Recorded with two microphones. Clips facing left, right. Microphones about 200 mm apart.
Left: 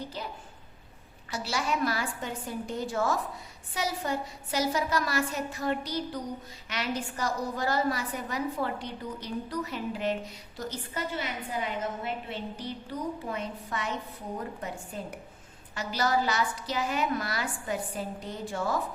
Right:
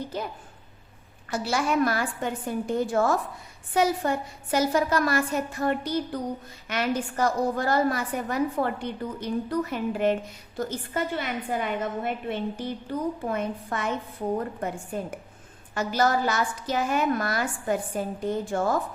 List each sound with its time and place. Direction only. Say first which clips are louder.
0.1 s a woman's voice: right 6 dB; 50° right (ahead or behind)